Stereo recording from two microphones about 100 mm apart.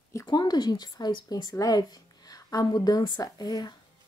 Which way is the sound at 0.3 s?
45° left (ahead or behind).